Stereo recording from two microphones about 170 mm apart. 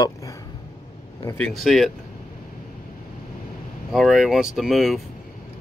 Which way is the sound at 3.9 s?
Centre (ahead or behind).